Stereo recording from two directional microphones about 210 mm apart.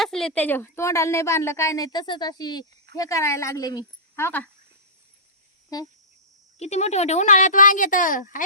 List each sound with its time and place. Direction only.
0.0 s a woman's voice: centre (ahead or behind)
5.7 s a woman's voice: 15° left (ahead or behind)
6.6 s speech: 30° left (ahead or behind)